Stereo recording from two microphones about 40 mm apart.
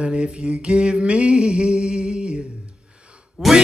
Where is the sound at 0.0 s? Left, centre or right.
Centre.